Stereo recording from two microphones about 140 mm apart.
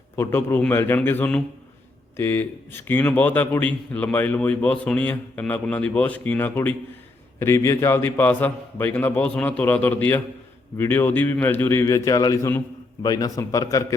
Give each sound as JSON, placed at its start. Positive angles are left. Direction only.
{"t": 0.2, "sound": "a man's voice", "side_deg": 15}